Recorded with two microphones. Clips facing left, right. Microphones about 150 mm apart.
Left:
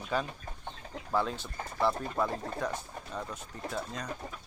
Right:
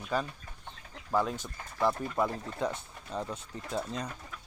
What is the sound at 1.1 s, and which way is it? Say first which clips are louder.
Speech: right 1 dB; 10° right (ahead or behind).